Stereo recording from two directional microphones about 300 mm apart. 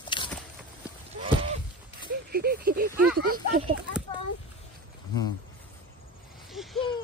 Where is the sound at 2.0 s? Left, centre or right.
Right.